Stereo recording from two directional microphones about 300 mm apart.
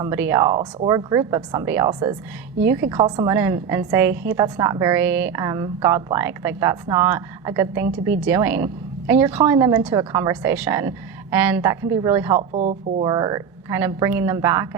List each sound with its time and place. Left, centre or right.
0.0 s a woman's voice: centre
12.4 s a woman's voice: right